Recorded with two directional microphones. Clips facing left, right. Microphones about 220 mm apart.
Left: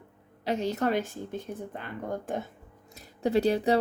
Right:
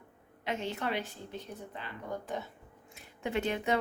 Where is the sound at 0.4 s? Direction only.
40° left (ahead or behind).